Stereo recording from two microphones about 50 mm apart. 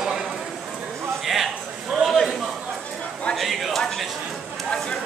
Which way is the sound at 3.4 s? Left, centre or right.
Centre.